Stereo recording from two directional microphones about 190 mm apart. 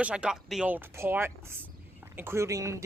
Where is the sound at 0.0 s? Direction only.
5° right (ahead or behind).